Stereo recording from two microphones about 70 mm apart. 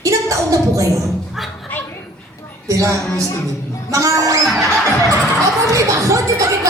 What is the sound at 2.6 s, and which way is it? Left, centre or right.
Speech, right.